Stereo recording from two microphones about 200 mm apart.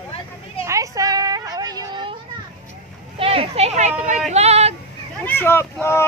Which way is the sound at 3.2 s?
30° right (ahead or behind).